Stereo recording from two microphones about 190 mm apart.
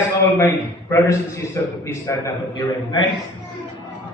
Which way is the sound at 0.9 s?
15° left (ahead or behind).